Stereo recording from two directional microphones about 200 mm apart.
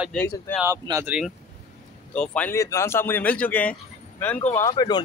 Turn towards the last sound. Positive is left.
turn(degrees=20)  # may be behind; listen again after turning